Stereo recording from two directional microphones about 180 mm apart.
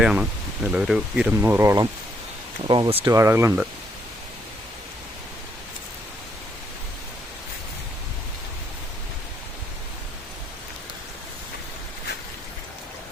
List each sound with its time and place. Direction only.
0.0 s speech: 5° right (ahead or behind)